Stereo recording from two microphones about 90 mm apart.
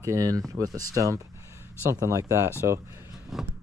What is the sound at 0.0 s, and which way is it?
Speech, 40° right (ahead or behind).